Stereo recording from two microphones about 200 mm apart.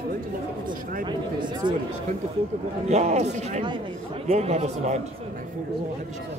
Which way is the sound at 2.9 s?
35° right (ahead or behind).